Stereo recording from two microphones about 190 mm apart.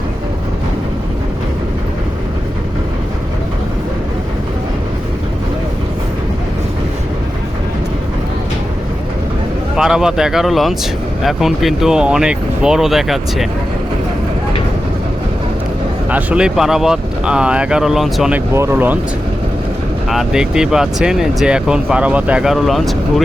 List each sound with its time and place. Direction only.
9.7 s speech: 5° right (ahead or behind)
16.0 s speech: 5° right (ahead or behind)
20.1 s speech: centre (ahead or behind)